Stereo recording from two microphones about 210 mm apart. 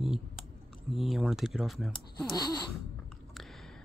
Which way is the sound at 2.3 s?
20° left (ahead or behind).